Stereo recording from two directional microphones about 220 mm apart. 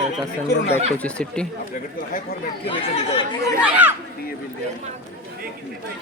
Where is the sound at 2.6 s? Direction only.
25° left (ahead or behind).